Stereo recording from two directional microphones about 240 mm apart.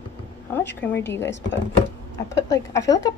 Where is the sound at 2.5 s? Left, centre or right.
Centre.